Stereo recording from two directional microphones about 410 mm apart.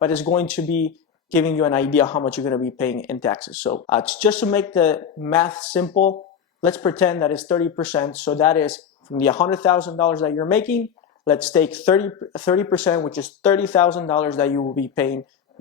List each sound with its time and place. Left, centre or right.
0.0 s speech: centre
5.9 s speech: centre
6.7 s speech: centre